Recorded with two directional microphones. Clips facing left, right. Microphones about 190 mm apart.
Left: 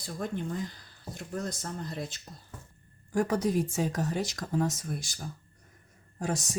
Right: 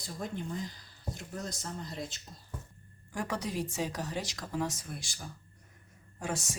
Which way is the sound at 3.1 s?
45° left (ahead or behind).